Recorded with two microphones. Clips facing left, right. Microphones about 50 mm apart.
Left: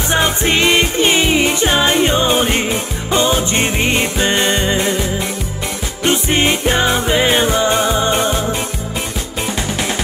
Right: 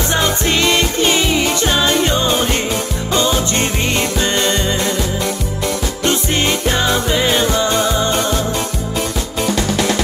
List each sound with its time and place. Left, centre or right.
0.1 s music: left
6.0 s music: left